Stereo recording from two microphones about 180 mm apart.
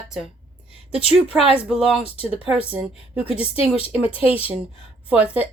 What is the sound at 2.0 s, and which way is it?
Speech, 30° left (ahead or behind).